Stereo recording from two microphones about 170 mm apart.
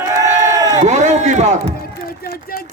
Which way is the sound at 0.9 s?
40° right (ahead or behind).